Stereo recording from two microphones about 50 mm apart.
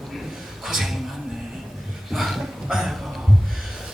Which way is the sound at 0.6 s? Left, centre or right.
Centre.